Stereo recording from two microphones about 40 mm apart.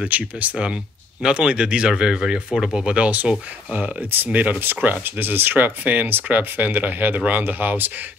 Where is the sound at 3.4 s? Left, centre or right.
Right.